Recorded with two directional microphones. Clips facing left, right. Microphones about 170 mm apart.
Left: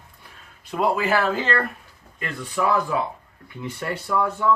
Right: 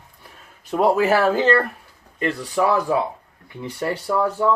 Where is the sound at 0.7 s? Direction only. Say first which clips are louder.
Right 5 dB; 40° right (ahead or behind).